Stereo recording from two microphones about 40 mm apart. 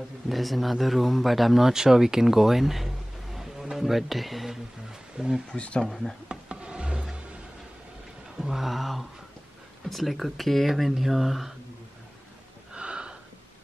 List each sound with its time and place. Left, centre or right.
0.3 s a man's voice: centre
5.1 s speech: centre
6.2 s wood: right
8.4 s a man's voice: centre
12.7 s a sound: right